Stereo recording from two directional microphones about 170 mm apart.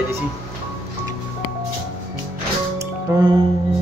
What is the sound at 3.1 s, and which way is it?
Speech, 15° right (ahead or behind).